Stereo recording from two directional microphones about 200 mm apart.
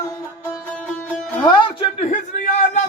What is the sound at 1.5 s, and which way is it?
Speech, 25° left (ahead or behind).